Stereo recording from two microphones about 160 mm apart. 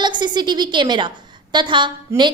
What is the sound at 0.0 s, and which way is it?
A woman's voice, 30° right (ahead or behind).